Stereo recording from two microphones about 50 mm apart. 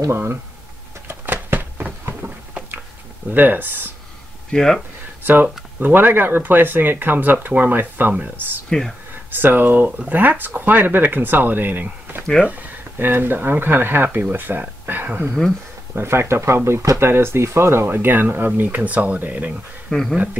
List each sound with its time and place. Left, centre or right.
0.1 s speech: right
1.0 s a sound: right
2.2 s a sound: right
3.3 s speech: right
4.5 s speech: centre
5.2 s speech: right
8.6 s speech: centre
9.3 s speech: right
16.0 s speech: right
17.1 s speech: right
17.8 s speech: right
19.9 s speech: centre